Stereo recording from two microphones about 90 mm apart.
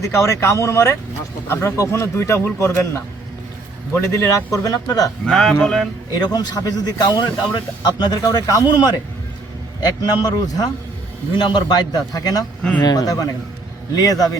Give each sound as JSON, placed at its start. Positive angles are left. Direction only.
{"t": 0.0, "sound": "speech", "side_deg": 35}
{"t": 5.2, "sound": "speech", "side_deg": 5}
{"t": 6.1, "sound": "a man's voice", "side_deg": 50}